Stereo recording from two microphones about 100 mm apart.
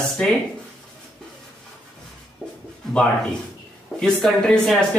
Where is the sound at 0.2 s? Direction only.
10° left (ahead or behind).